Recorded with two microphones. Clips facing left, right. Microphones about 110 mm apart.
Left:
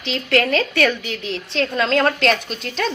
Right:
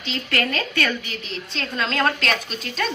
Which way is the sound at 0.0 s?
75° left (ahead or behind).